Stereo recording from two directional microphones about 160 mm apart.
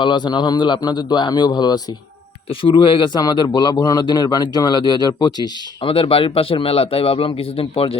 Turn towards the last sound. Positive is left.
turn(degrees=35)  # may be behind; listen again after turning